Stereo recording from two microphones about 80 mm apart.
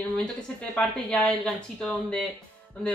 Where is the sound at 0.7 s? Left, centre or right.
Centre.